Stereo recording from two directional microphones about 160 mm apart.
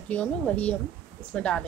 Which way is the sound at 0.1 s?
10° left (ahead or behind).